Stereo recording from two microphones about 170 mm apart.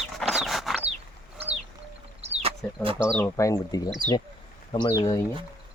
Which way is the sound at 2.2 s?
35° right (ahead or behind).